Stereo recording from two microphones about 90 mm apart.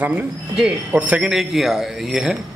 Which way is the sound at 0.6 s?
15° right (ahead or behind).